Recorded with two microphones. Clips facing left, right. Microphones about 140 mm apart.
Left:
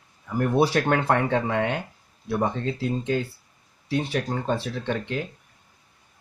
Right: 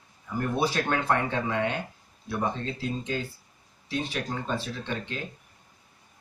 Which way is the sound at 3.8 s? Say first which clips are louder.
Left 5 dB; 60° left (ahead or behind).